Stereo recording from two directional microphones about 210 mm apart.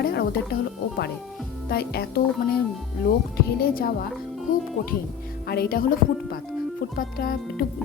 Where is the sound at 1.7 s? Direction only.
50° left (ahead or behind).